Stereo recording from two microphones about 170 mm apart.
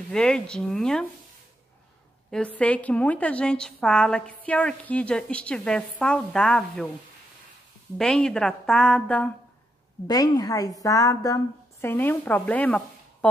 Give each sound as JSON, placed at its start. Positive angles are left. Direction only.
{"t": 0.1, "sound": "a woman's voice", "side_deg": 5}
{"t": 2.3, "sound": "a woman's voice", "side_deg": 5}
{"t": 8.0, "sound": "a woman's voice", "side_deg": 5}
{"t": 10.0, "sound": "a woman's voice", "side_deg": 20}